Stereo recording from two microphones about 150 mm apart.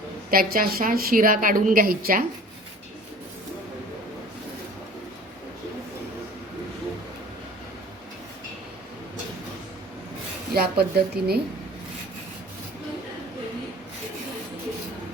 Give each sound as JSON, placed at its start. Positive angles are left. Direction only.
{"t": 0.3, "sound": "a woman's voice", "side_deg": -75}
{"t": 10.5, "sound": "a woman's voice", "side_deg": -90}